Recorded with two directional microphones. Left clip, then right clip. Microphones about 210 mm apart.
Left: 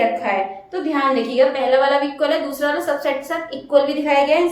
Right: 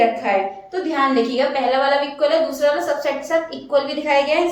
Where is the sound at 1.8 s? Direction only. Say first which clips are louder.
Even; 20° left (ahead or behind).